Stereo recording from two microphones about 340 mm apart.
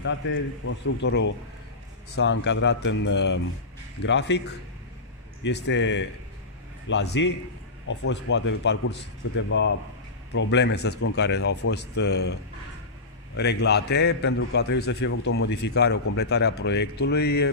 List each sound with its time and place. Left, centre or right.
0.0 s a man's voice: left
13.4 s a man's voice: left